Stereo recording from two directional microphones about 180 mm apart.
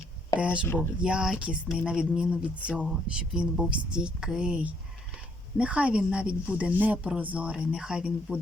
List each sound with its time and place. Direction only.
0.3 s speech: 5° right (ahead or behind)